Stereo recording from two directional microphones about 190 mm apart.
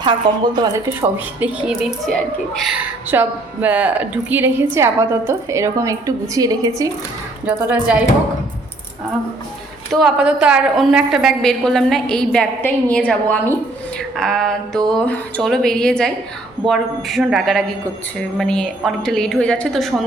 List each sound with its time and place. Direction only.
0.0 s a woman's voice: 25° right (ahead or behind)
0.9 s a woman's voice: 5° right (ahead or behind)
7.4 s a woman's voice: 5° right (ahead or behind)
9.9 s a woman's voice: centre (ahead or behind)